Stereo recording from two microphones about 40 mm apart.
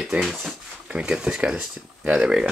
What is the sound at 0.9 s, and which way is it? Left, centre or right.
Speech, right.